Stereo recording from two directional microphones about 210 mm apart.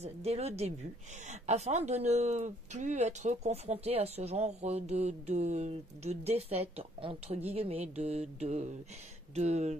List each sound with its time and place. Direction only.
0.0 s speech: 30° right (ahead or behind)